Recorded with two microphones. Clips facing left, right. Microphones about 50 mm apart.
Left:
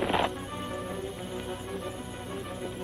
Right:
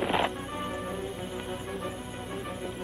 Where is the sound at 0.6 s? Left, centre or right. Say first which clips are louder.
Right 2 dB; centre.